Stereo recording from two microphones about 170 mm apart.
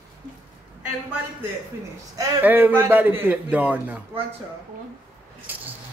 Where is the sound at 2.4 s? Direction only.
10° right (ahead or behind).